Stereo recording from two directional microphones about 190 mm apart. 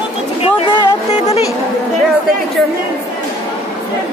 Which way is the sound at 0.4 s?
30° left (ahead or behind).